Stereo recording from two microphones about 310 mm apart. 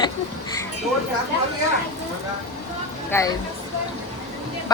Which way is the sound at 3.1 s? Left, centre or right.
Centre.